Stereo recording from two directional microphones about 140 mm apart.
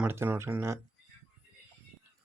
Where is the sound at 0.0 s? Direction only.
15° right (ahead or behind).